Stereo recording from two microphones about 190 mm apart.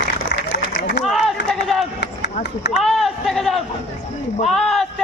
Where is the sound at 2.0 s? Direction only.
65° left (ahead or behind).